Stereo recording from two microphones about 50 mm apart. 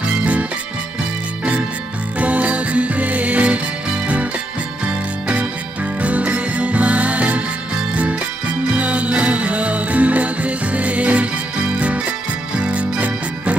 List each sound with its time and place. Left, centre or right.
0.2 s music: right
2.1 s music: right
6.0 s music: right
12.5 s music: right